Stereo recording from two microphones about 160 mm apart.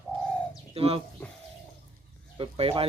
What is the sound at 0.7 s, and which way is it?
Speech, 40° right (ahead or behind).